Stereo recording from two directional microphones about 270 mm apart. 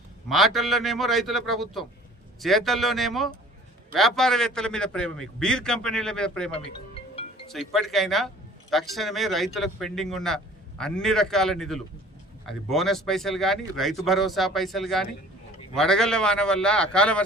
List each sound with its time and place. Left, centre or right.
0.3 s speech: centre
6.5 s music: left
7.5 s speech: centre